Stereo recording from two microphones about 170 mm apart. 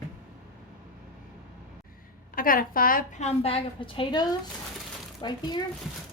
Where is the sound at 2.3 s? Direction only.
55° left (ahead or behind).